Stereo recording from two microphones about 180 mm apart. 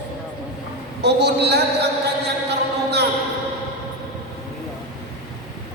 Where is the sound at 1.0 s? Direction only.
65° right (ahead or behind).